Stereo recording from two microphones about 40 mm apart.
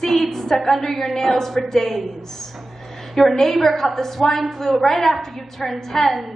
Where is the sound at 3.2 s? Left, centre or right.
Centre.